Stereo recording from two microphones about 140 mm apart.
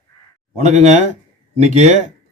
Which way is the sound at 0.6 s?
55° right (ahead or behind).